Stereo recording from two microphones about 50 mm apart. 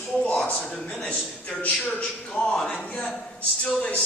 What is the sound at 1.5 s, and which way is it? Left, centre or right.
Speech, left.